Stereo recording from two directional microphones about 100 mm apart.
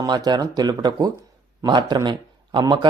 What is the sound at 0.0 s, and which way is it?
A man's voice, 45° right (ahead or behind).